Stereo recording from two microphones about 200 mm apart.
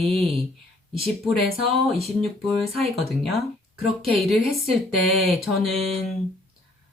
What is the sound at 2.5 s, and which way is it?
Speech, centre (ahead or behind).